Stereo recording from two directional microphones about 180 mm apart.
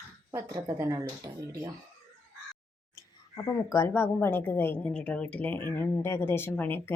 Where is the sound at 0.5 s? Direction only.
20° right (ahead or behind).